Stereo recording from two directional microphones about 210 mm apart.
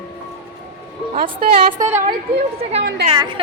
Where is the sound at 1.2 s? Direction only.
45° right (ahead or behind).